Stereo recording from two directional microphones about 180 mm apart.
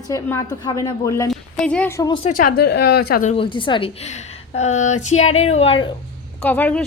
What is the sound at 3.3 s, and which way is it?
A woman's voice, 30° left (ahead or behind).